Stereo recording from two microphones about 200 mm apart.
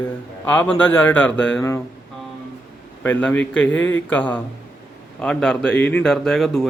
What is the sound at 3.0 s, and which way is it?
A man's voice, 10° left (ahead or behind).